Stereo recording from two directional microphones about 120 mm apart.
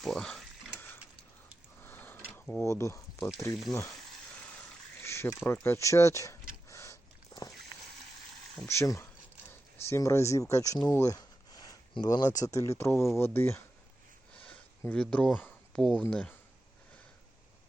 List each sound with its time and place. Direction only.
0.0 s speech: 5° left (ahead or behind)
1.8 s a sound: 15° left (ahead or behind)
2.3 s speech: 20° left (ahead or behind)
5.0 s a sound: 20° left (ahead or behind)
8.6 s speech: 25° left (ahead or behind)
12.4 s speech: 25° left (ahead or behind)
14.9 s speech: 10° left (ahead or behind)